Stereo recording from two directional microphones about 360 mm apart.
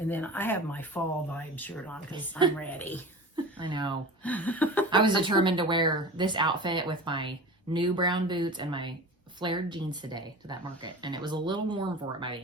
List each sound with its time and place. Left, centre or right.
0.1 s speech: centre
3.3 s speech: centre
4.2 s speech: centre
4.9 s speech: centre